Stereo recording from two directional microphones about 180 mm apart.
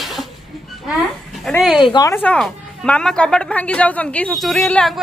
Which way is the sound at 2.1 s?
5° left (ahead or behind).